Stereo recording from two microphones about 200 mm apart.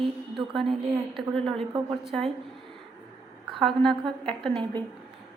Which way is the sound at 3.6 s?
Centre (ahead or behind).